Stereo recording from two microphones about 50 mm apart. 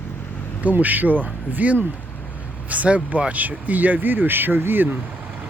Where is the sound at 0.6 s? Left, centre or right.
Right.